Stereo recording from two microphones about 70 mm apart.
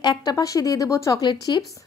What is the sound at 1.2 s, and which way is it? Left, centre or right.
Speech, left.